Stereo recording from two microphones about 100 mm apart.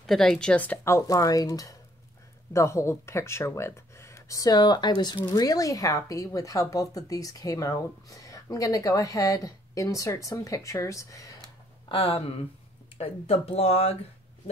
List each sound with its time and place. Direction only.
0.0 s speech: 5° left (ahead or behind)
0.8 s speech: 30° left (ahead or behind)
11.9 s speech: 70° left (ahead or behind)
12.9 s speech: 90° left